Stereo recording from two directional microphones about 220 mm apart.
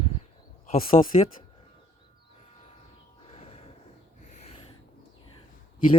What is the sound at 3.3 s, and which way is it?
Music, 30° left (ahead or behind).